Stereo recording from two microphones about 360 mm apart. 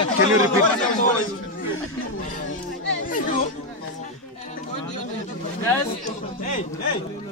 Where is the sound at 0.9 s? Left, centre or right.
Left.